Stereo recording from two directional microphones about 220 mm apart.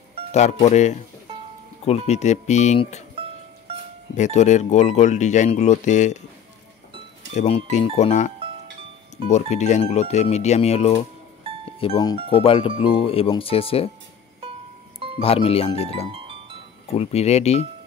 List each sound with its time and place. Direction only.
0.3 s speech: 30° left (ahead or behind)
4.1 s speech: 30° left (ahead or behind)
7.3 s speech: 30° left (ahead or behind)
9.3 s speech: 30° left (ahead or behind)
15.1 s speech: 25° left (ahead or behind)
16.1 s music: 25° right (ahead or behind)
16.8 s speech: 30° left (ahead or behind)